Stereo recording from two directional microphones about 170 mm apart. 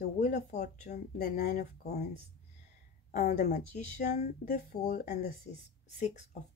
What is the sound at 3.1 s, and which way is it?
Speech, 65° left (ahead or behind).